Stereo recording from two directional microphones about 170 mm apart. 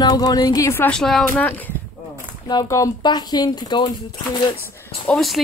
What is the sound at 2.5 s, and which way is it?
Speech, 20° left (ahead or behind).